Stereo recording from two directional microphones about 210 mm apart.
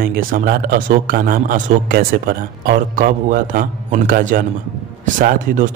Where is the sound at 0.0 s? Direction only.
45° right (ahead or behind).